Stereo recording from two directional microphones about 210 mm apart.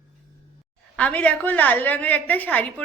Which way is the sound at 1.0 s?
5° left (ahead or behind).